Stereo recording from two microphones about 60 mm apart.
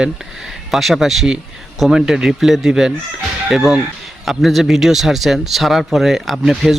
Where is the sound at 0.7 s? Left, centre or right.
Centre.